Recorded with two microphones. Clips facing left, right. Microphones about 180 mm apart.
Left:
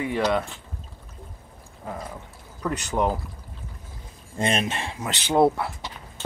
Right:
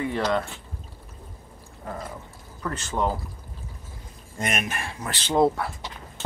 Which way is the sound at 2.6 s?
15° left (ahead or behind).